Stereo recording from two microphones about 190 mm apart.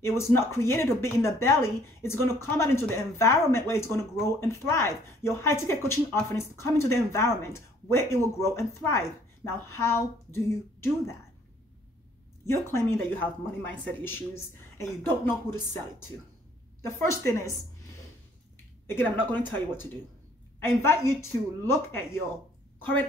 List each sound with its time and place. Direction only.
0.0 s speech: 15° left (ahead or behind)
12.4 s speech: 15° left (ahead or behind)
16.8 s speech: 15° left (ahead or behind)
18.9 s speech: 10° left (ahead or behind)
20.6 s speech: 15° left (ahead or behind)